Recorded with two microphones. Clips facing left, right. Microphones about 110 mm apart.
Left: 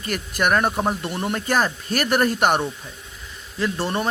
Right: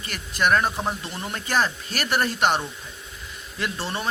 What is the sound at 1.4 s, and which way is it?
Speech, 45° left (ahead or behind).